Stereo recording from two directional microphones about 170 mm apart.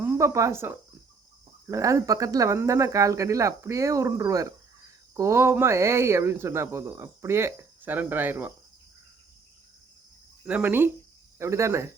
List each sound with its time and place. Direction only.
0.0 s speech: 15° right (ahead or behind)
10.4 s speech: 10° right (ahead or behind)